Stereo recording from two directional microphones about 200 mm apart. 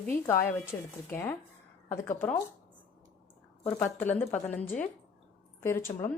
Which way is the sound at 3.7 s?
10° left (ahead or behind).